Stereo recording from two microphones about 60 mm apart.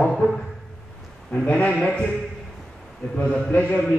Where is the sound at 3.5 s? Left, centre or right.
Left.